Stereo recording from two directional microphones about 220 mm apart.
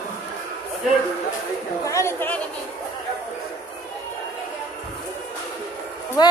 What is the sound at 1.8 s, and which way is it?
Speech, 10° left (ahead or behind).